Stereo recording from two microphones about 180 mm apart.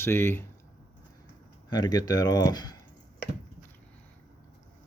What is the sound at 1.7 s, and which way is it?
Speech, 25° left (ahead or behind).